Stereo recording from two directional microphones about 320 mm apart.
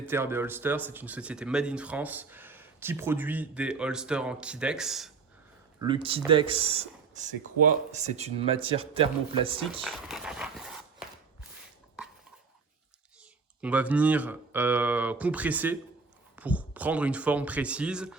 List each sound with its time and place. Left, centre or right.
0.0 s speech: centre
5.8 s speech: centre
9.8 s speech: centre
13.6 s speech: centre